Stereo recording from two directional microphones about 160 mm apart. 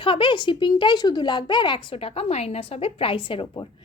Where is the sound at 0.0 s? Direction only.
30° left (ahead or behind).